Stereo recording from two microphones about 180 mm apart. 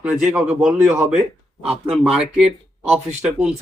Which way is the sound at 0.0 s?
5° right (ahead or behind).